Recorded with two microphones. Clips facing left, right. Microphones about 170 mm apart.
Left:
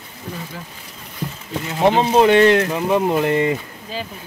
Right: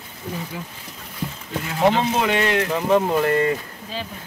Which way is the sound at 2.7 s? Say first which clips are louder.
Left 1 dB; 5° left (ahead or behind).